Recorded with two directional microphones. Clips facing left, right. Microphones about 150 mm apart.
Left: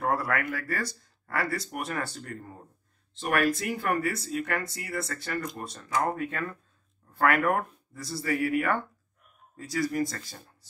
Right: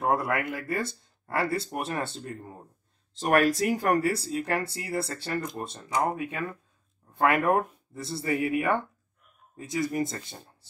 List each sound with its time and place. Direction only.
0.0 s speech: 20° right (ahead or behind)
3.2 s speech: 40° right (ahead or behind); by 10.5 s 25° right (ahead or behind)